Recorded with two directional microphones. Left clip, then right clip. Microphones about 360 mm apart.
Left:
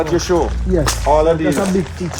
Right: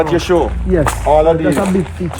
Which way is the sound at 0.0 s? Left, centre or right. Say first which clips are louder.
Right 3 dB; right.